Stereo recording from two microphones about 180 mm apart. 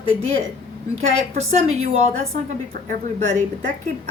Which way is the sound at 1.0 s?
40° right (ahead or behind).